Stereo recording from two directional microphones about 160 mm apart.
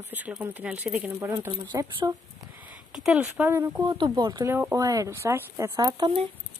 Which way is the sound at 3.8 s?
30° right (ahead or behind).